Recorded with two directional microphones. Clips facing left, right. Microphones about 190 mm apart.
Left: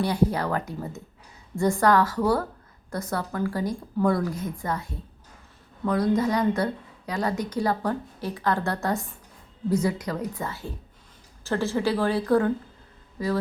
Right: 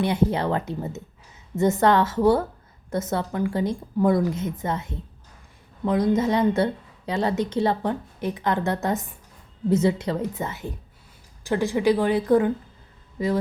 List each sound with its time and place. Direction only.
0.0 s a woman's voice: 20° right (ahead or behind)